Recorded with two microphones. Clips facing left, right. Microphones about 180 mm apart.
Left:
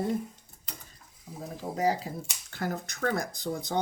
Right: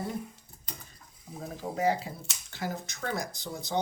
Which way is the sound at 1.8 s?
40° left (ahead or behind).